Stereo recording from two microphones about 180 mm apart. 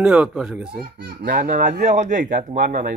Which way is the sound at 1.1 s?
55° right (ahead or behind).